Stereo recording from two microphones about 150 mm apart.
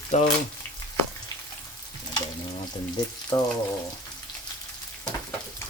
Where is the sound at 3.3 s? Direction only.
20° left (ahead or behind).